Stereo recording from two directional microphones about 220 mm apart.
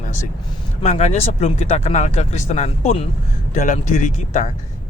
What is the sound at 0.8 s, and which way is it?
A man's voice, 30° left (ahead or behind).